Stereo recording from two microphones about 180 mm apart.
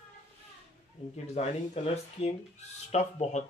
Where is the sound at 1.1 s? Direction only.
35° left (ahead or behind).